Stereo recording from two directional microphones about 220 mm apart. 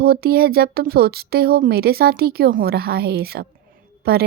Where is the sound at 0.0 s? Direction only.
45° right (ahead or behind).